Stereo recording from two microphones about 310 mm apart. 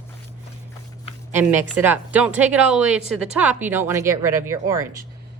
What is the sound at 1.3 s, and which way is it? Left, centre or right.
A woman's voice, centre.